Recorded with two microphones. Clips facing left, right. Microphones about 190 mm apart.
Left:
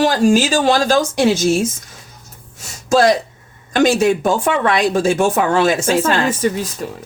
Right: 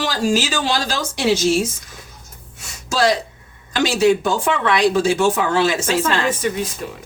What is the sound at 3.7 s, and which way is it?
Speech, 50° left (ahead or behind).